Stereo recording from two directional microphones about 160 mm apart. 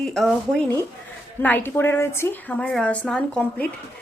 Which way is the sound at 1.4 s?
10° left (ahead or behind).